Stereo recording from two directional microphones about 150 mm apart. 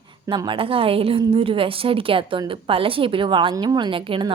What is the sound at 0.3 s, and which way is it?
A woman's voice, 35° right (ahead or behind).